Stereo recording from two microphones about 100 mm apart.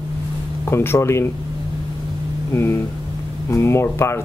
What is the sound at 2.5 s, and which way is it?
Speech, 25° left (ahead or behind).